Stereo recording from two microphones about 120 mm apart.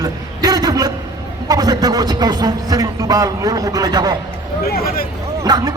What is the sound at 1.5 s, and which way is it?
Speech, 35° right (ahead or behind).